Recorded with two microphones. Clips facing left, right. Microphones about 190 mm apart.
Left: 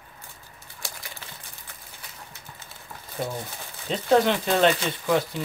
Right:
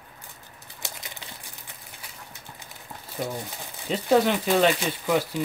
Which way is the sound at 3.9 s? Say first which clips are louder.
Even; 5° right (ahead or behind).